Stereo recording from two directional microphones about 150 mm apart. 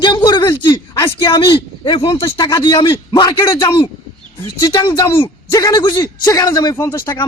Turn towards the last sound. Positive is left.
turn(degrees=20)  # may be behind; listen again after turning